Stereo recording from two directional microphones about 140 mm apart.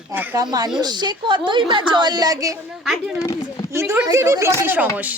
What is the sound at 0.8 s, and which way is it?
A woman's voice, 30° right (ahead or behind).